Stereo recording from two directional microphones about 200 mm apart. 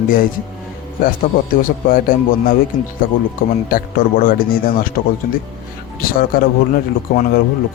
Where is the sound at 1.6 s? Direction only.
45° left (ahead or behind).